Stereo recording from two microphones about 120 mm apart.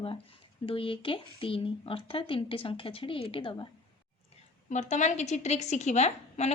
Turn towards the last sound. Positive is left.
turn(degrees=70)  # may be behind; listen again after turning